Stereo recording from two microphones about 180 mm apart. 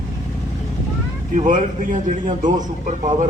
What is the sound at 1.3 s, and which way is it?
A man's voice, 45° right (ahead or behind).